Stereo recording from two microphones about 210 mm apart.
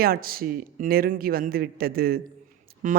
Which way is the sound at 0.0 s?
45° right (ahead or behind).